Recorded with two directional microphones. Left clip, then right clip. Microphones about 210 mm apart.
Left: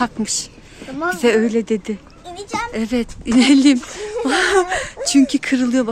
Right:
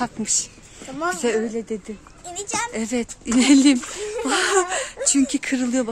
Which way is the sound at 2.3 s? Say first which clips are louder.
Left 2 dB; 20° right (ahead or behind).